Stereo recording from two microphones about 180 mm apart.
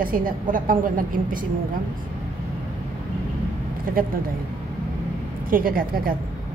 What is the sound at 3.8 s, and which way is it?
Speech, 55° right (ahead or behind).